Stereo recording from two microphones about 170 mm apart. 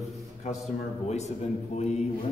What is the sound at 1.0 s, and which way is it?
Speech, 40° left (ahead or behind).